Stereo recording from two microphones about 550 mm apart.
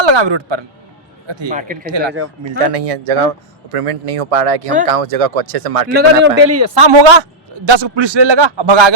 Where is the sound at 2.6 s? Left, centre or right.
Right.